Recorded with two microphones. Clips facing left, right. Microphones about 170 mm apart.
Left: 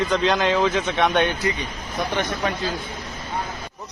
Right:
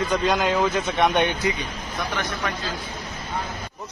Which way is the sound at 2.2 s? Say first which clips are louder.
Left 4 dB; 25° left (ahead or behind).